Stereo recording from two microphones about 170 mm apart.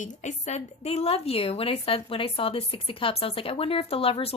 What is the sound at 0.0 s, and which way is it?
A woman's voice, 45° left (ahead or behind).